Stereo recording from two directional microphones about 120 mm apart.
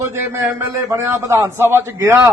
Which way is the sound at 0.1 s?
20° right (ahead or behind).